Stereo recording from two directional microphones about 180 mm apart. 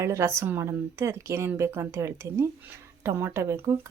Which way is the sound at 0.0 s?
15° right (ahead or behind).